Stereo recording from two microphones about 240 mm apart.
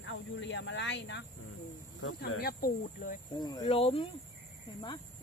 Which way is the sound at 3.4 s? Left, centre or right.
Centre.